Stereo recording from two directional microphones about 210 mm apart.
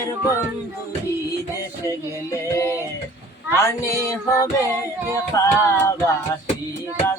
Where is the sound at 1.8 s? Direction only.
15° left (ahead or behind).